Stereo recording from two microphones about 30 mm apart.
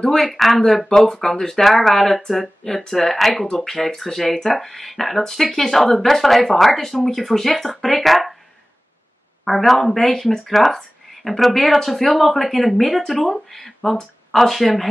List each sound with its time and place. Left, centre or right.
0.2 s speech: centre
0.8 s speech: left; by 8.4 s centre
9.4 s speech: centre